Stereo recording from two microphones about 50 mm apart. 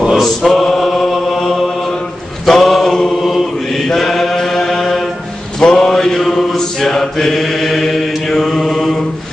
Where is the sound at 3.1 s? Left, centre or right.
Centre.